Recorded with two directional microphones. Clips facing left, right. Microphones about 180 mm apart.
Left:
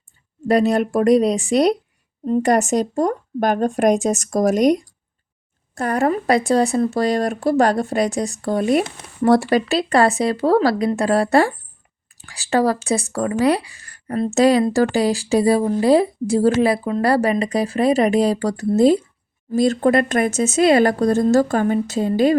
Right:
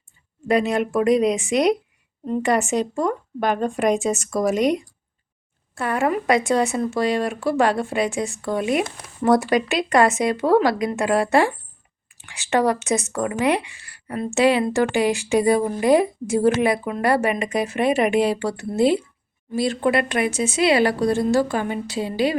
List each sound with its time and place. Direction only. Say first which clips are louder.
0.4 s speech: left 3 dB; 35° left (ahead or behind)